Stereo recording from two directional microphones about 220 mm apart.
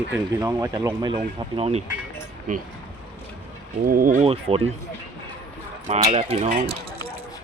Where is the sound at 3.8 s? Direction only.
40° right (ahead or behind).